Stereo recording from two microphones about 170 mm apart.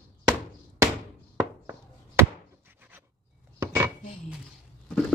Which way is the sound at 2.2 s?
15° right (ahead or behind).